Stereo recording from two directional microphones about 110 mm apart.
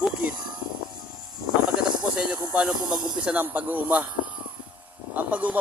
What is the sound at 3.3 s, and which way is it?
Speech, 15° right (ahead or behind).